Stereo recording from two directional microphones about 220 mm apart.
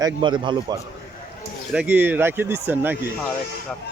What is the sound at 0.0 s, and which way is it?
Speech, 20° right (ahead or behind).